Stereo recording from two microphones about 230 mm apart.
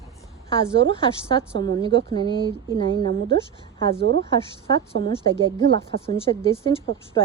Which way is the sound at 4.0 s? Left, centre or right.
Right.